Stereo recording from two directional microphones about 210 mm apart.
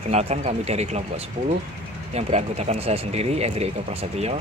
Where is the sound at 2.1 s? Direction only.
30° right (ahead or behind).